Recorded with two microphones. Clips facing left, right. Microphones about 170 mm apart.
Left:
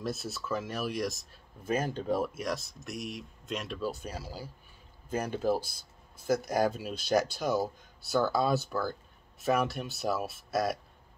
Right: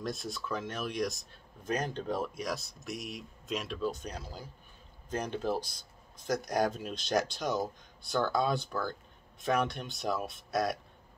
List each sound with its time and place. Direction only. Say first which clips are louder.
0.0 s speech: left 1 dB; 5° left (ahead or behind)